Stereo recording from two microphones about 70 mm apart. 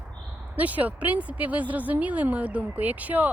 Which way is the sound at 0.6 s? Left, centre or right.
Right.